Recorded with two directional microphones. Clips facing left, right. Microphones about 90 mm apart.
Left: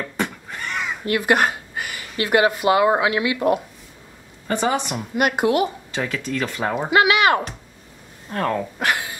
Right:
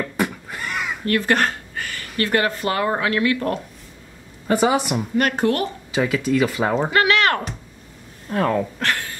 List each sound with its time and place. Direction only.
0.0 s neigh: 5° right (ahead or behind)
1.0 s speech: 15° left (ahead or behind)
4.5 s speech: 5° right (ahead or behind)
5.1 s speech: 10° left (ahead or behind)
5.9 s speech: 5° right (ahead or behind)
6.9 s a sound: 10° left (ahead or behind)
8.3 s speech: centre (ahead or behind)
8.7 s a sound: 15° left (ahead or behind)